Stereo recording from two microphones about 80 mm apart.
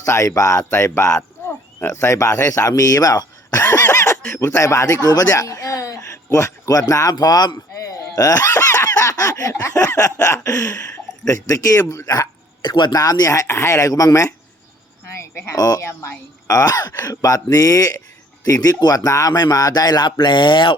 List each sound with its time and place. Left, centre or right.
0.0 s speech: left
0.6 s speech: left
3.8 s a sound: left
4.4 s a man's voice: left
12.6 s a man's voice: left
12.9 s speech: left
15.1 s a sound: left
15.5 s speech: left
15.8 s speech: left
19.3 s speech: left